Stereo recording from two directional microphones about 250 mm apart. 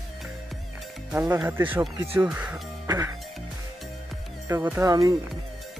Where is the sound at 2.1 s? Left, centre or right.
Centre.